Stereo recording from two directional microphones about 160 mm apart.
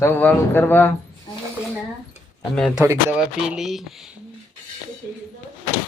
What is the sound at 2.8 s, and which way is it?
Speech, 15° right (ahead or behind).